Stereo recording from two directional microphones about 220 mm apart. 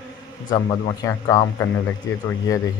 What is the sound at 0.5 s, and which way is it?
Speech, 15° left (ahead or behind).